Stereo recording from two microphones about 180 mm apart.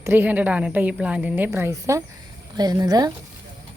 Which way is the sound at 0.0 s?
10° right (ahead or behind).